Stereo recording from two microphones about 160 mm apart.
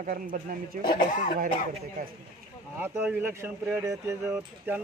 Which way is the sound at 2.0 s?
65° right (ahead or behind).